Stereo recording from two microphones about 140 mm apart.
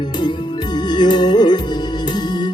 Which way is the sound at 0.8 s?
30° left (ahead or behind).